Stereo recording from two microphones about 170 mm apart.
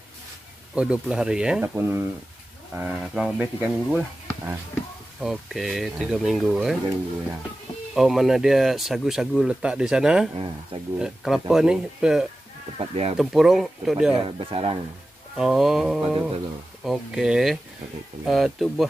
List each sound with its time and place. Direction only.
0.7 s speech: 5° right (ahead or behind)
5.2 s speech: centre (ahead or behind)
7.9 s speech: centre (ahead or behind)
12.7 s speech: 35° right (ahead or behind)
13.2 s speech: centre (ahead or behind)
14.1 s speech: 30° right (ahead or behind)
15.3 s speech: centre (ahead or behind)